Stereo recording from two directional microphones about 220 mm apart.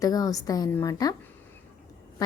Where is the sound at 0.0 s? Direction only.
15° left (ahead or behind).